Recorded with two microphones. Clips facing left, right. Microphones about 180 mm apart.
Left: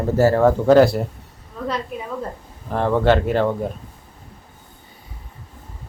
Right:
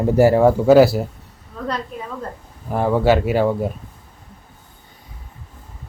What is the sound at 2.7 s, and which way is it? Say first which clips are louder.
Speech: right 1 dB; 10° right (ahead or behind).